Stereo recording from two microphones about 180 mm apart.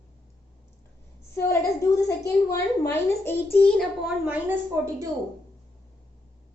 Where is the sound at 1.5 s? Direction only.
20° left (ahead or behind); by 4.3 s centre (ahead or behind).